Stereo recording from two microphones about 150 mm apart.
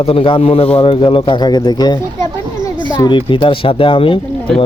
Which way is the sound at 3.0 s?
35° left (ahead or behind).